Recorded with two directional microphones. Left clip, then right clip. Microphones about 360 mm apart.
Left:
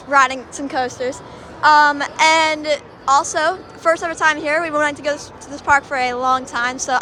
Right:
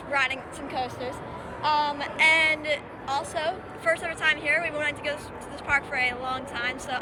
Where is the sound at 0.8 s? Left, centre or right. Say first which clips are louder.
Left 10 dB; left.